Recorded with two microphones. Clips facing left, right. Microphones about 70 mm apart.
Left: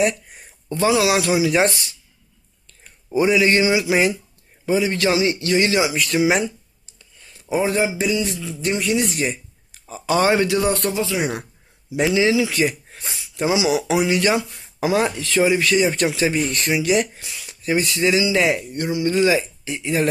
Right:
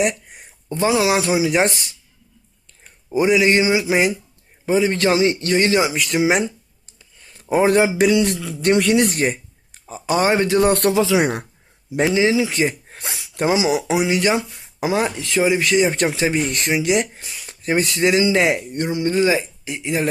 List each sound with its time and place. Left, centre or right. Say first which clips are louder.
0.0 s speech: left 1 dB; centre
3.1 s speech: right 1 dB; centre; by 5.9 s right
6.1 s speech: right 1 dB; right
7.5 s a man's voice: right 4 dB; right
9.8 s speech: even; right
10.6 s speech: right 5 dB; right
10.9 s speech: right 6 dB; right
12.0 s speech: even; right
13.0 s a sound: right 2 dB; right
13.7 s speech: even; right
14.5 s a sound: left 1 dB; centre
14.8 s speech: left 1 dB; right
17.4 s speech: right 1 dB; right
19.6 s speech: left 1 dB; centre